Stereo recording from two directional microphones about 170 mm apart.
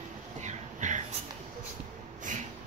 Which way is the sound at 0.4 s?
45° right (ahead or behind).